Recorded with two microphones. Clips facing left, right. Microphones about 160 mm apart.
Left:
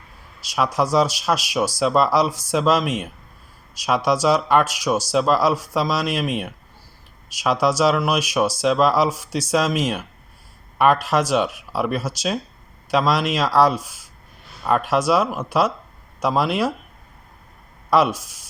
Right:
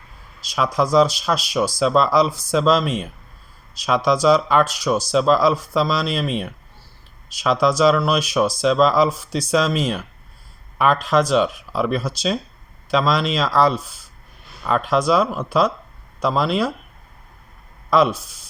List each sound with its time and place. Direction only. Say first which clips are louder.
0.4 s speech: right 1 dB; 5° left (ahead or behind)
17.9 s speech: right 1 dB; 10° left (ahead or behind)